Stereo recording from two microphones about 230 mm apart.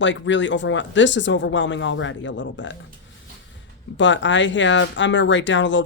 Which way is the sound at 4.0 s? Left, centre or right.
Left.